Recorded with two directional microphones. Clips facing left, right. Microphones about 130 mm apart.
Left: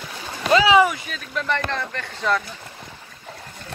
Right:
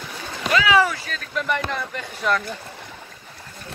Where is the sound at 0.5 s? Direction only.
30° left (ahead or behind).